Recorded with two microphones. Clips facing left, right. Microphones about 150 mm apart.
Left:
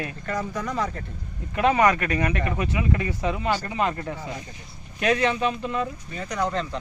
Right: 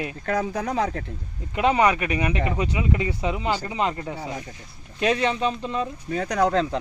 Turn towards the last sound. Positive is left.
turn(degrees=-85)